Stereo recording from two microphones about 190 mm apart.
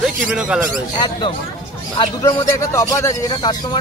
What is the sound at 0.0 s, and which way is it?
Speech, 5° right (ahead or behind).